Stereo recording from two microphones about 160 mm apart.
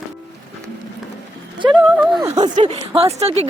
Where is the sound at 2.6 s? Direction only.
35° right (ahead or behind).